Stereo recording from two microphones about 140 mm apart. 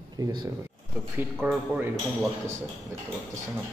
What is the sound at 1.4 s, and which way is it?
Speech, 10° right (ahead or behind).